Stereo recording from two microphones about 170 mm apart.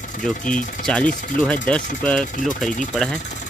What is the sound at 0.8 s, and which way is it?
Speech, 5° left (ahead or behind).